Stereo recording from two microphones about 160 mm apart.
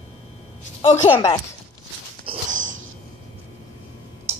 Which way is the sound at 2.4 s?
50° right (ahead or behind).